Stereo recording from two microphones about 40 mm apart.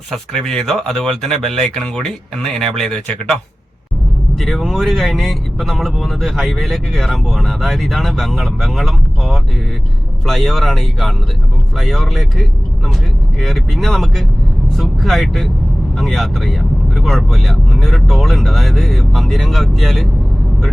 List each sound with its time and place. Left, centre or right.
0.1 s speech: centre
4.4 s speech: centre